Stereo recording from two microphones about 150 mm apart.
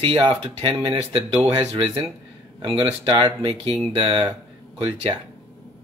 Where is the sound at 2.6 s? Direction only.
35° right (ahead or behind).